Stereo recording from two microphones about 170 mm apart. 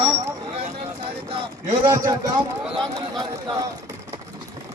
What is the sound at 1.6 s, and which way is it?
Speech, 20° right (ahead or behind).